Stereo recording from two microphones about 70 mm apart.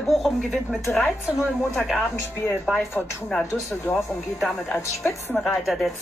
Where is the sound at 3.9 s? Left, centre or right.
Left.